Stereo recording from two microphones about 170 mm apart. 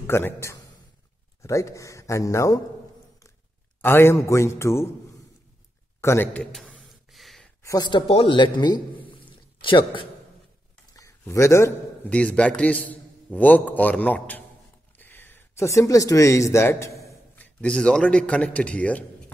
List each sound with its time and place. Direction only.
0.0 s speech: 15° left (ahead or behind)
3.8 s speech: 15° left (ahead or behind)
5.9 s a sound: 15° left (ahead or behind)
7.6 s a man's voice: 20° left (ahead or behind)
10.9 s a man's voice: 20° left (ahead or behind)